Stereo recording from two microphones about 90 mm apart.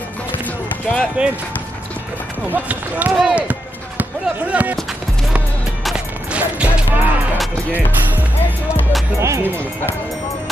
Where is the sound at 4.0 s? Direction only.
20° right (ahead or behind).